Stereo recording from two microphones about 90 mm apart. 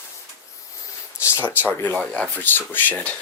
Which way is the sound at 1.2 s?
25° left (ahead or behind).